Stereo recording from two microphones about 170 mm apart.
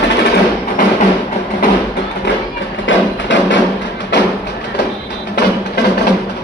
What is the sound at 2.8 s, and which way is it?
Music, 90° left.